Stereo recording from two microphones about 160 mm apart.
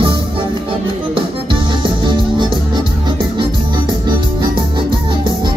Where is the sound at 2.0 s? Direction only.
30° right (ahead or behind).